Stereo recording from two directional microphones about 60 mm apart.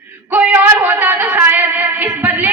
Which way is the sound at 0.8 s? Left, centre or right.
Right.